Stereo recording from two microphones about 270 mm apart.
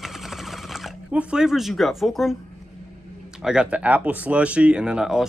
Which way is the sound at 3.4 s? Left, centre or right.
Centre.